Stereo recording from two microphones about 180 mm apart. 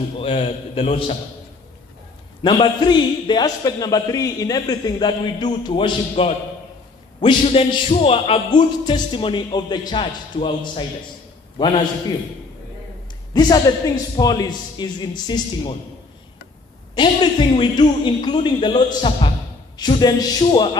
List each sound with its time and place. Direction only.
0.2 s a man's voice: 35° left (ahead or behind)
2.4 s a man's voice: 25° left (ahead or behind)
13.3 s a man's voice: 20° left (ahead or behind)
16.9 s a man's voice: 25° left (ahead or behind)